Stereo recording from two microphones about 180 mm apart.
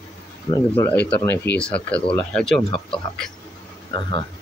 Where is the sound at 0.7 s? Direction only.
10° left (ahead or behind).